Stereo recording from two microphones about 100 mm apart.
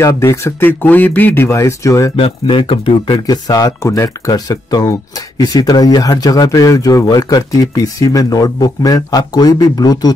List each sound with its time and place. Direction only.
0.0 s speech: 30° left (ahead or behind)
0.7 s speech: 15° left (ahead or behind)
2.1 s speech: 60° left (ahead or behind)
3.3 s speech: 40° left (ahead or behind)